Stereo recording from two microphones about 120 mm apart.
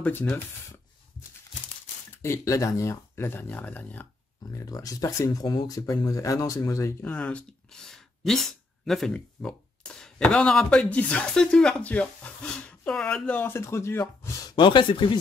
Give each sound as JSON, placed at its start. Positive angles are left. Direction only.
{"t": 0.0, "sound": "speech", "side_deg": 15}
{"t": 2.2, "sound": "speech", "side_deg": 25}
{"t": 4.5, "sound": "speech", "side_deg": 25}
{"t": 14.5, "sound": "speech", "side_deg": 40}